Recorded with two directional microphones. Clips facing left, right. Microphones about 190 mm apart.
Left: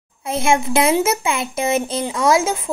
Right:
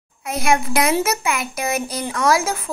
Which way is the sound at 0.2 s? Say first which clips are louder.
Left 2 dB; 25° left (ahead or behind).